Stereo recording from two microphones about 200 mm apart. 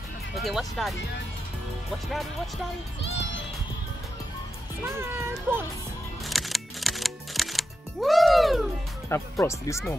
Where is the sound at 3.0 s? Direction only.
65° left (ahead or behind).